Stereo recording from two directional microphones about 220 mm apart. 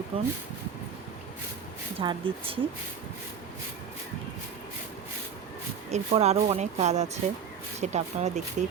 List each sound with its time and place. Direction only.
0.1 s speech: 25° right (ahead or behind)
2.0 s speech: 25° right (ahead or behind)
5.9 s speech: 30° right (ahead or behind)